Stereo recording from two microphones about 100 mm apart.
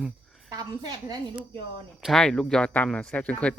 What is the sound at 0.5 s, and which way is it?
Speech, 40° right (ahead or behind).